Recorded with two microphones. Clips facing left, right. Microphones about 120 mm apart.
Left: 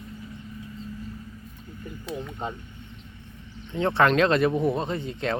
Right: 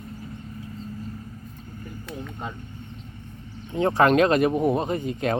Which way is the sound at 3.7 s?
40° right (ahead or behind).